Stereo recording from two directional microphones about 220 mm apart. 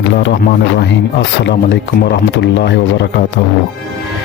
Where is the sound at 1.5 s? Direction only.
50° left (ahead or behind).